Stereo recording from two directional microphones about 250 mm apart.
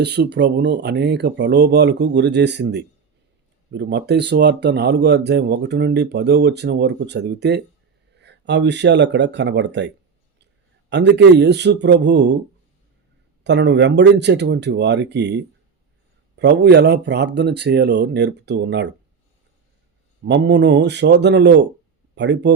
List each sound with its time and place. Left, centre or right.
0.0 s speech: right
13.4 s speech: right
20.2 s speech: right